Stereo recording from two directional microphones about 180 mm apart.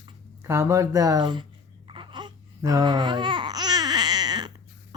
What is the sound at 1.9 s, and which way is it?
Babbling, 25° right (ahead or behind).